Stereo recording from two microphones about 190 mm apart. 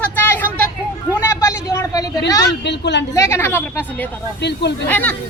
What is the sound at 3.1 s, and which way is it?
Speech, 15° left (ahead or behind).